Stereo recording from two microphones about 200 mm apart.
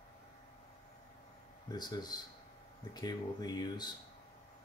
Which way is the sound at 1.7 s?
20° left (ahead or behind).